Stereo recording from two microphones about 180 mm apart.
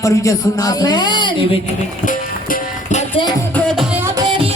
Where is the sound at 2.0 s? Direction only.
50° left (ahead or behind).